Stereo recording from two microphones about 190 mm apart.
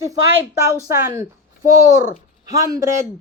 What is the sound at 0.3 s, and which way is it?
Speech, 15° right (ahead or behind).